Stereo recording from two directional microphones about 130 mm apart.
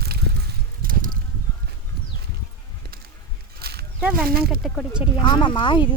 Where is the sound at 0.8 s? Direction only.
90° right.